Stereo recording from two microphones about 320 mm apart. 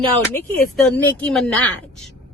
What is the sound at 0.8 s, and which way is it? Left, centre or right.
Speech, centre.